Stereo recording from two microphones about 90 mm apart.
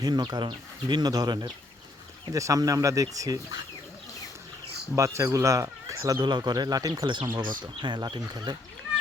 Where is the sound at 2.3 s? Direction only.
40° right (ahead or behind).